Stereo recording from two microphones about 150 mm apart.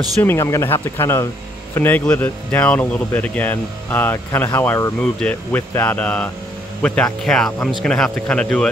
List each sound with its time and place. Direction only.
0.2 s speech: 15° left (ahead or behind)